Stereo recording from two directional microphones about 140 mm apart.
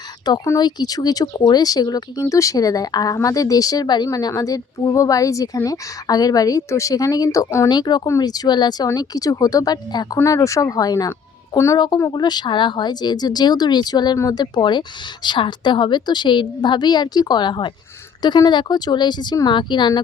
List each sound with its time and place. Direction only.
0.3 s speech: 25° left (ahead or behind)
12.1 s speech: 30° left (ahead or behind)